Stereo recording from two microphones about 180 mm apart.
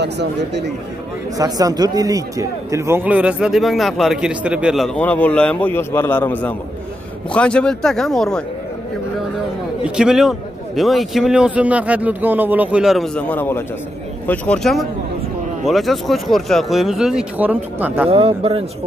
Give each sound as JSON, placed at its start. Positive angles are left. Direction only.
{"t": 0.0, "sound": "speech", "side_deg": -70}
{"t": 1.4, "sound": "speech", "side_deg": -20}
{"t": 9.8, "sound": "speech", "side_deg": -5}
{"t": 18.0, "sound": "a man's voice", "side_deg": -35}